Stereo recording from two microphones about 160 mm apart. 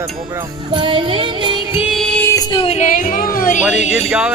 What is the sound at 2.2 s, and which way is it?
Music, 25° left (ahead or behind).